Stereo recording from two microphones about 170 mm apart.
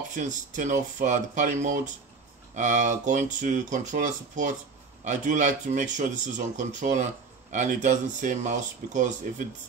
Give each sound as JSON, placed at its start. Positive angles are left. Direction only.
{"t": 0.1, "sound": "speech", "side_deg": -45}